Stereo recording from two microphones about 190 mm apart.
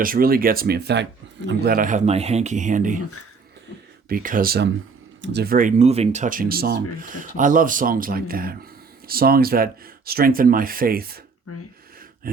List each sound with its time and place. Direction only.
0.0 s speech: 50° right (ahead or behind)
4.1 s speech: 45° right (ahead or behind)
12.2 s a sound: 50° right (ahead or behind)